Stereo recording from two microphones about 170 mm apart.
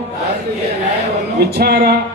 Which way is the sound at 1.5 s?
70° right (ahead or behind).